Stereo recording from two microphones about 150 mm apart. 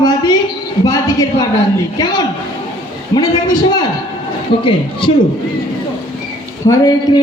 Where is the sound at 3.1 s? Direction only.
25° left (ahead or behind).